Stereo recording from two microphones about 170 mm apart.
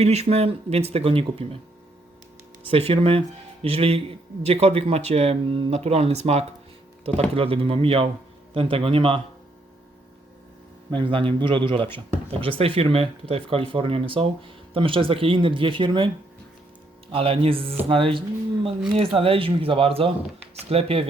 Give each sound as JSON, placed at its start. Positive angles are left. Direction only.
{"t": 0.0, "sound": "speech", "side_deg": -40}
{"t": 2.6, "sound": "speech", "side_deg": -35}
{"t": 10.9, "sound": "a man's voice", "side_deg": -30}
{"t": 17.1, "sound": "speech", "side_deg": -30}